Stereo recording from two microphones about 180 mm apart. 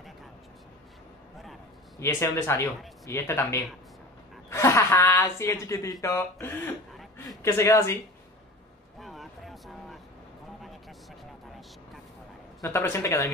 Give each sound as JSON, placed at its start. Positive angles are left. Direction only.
{"t": 2.0, "sound": "speech", "side_deg": 15}
{"t": 9.0, "sound": "a sound", "side_deg": 0}
{"t": 12.6, "sound": "speech", "side_deg": 15}